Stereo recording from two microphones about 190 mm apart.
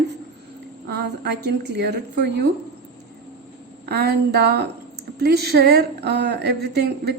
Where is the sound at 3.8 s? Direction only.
60° right (ahead or behind).